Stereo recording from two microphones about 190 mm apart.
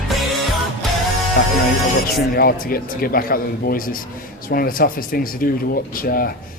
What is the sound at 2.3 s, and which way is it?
Speech, 50° left (ahead or behind).